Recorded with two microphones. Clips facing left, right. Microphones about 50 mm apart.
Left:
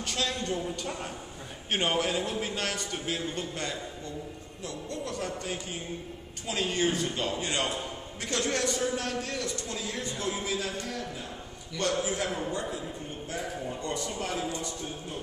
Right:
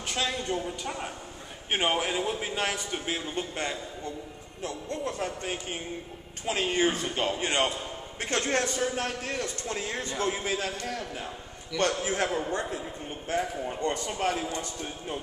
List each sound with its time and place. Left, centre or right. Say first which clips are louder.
0.0 s a man's voice: right 1 dB; centre; by 15.1 s right